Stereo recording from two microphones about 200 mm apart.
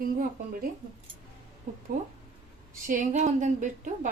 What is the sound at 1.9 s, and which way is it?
A woman's voice, 40° right (ahead or behind).